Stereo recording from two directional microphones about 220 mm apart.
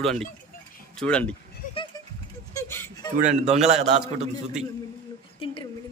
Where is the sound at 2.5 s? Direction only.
10° left (ahead or behind).